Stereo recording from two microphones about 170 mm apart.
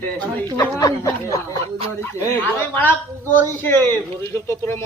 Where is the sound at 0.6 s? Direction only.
20° left (ahead or behind).